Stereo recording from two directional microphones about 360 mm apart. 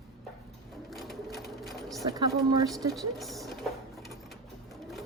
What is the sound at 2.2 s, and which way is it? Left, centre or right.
Speech, centre.